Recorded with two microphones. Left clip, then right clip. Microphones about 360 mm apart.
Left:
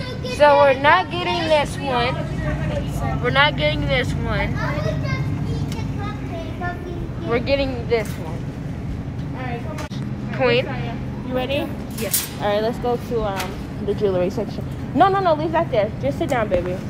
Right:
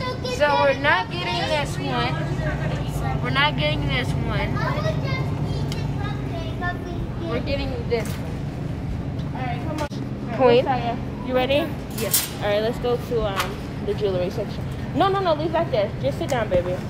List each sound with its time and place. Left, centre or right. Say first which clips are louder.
0.4 s speech: left 6 dB; centre
3.3 s speech: left 4 dB; centre
7.2 s speech: left 7 dB; centre
10.3 s a woman's voice: right 2 dB; centre
12.4 s speech: left 2 dB; centre
15.0 s a woman's voice: left 4 dB; left